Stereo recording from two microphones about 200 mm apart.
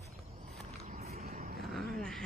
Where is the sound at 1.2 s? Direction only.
45° right (ahead or behind).